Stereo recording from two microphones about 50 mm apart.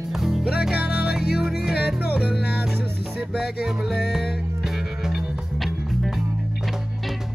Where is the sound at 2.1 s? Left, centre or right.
Right.